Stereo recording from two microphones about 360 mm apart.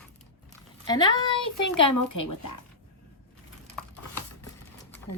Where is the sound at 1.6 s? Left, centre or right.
Left.